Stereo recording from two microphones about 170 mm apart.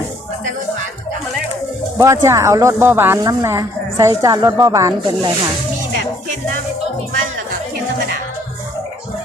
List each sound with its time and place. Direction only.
2.0 s a woman's voice: 20° right (ahead or behind)